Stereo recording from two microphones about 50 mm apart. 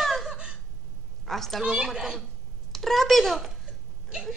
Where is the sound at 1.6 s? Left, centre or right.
Centre.